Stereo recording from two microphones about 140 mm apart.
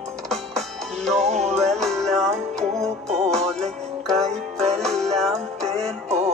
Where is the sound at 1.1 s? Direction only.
55° right (ahead or behind).